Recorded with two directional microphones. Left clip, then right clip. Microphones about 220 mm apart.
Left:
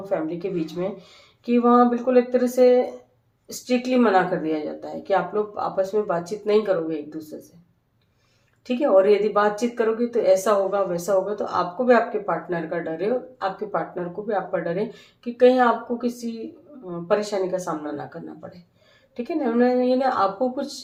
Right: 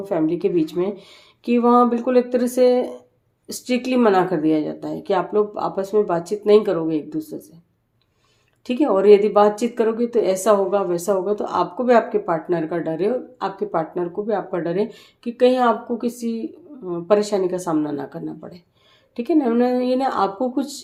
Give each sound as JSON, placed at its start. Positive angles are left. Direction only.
{"t": 0.0, "sound": "speech", "side_deg": -45}
{"t": 8.6, "sound": "speech", "side_deg": -45}